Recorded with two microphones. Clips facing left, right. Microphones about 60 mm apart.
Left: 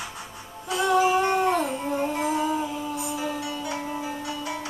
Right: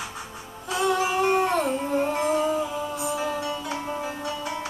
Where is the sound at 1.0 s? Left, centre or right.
Centre.